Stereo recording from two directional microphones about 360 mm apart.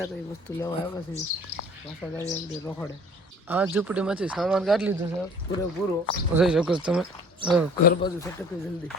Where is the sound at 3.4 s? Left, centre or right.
Centre.